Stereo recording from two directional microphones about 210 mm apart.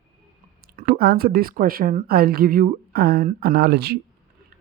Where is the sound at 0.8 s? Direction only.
45° right (ahead or behind).